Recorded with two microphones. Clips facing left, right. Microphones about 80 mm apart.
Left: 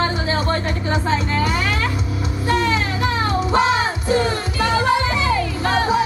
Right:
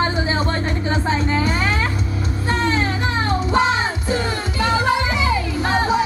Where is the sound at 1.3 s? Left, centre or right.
Right.